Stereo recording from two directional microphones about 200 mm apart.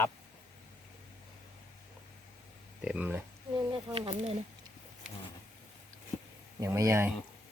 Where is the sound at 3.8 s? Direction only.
25° right (ahead or behind).